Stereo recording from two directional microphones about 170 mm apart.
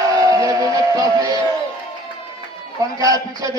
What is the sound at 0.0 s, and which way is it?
Music, 20° right (ahead or behind).